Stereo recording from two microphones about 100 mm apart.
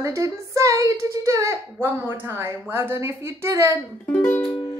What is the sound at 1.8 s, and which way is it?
A woman's voice, 20° right (ahead or behind).